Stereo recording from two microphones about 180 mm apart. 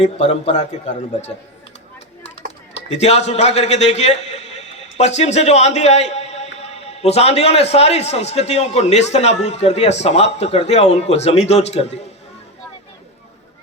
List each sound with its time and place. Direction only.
0.0 s a man's voice: 40° left (ahead or behind)
2.9 s a man's voice: 35° left (ahead or behind)